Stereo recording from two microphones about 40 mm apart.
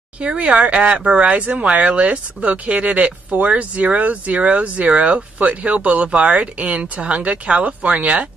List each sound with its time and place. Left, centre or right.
0.2 s speech: right